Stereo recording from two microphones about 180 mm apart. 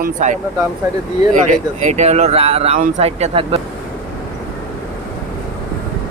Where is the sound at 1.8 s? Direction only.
40° right (ahead or behind).